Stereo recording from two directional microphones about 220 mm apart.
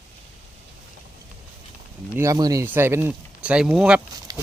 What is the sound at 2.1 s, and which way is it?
Speech, 15° right (ahead or behind).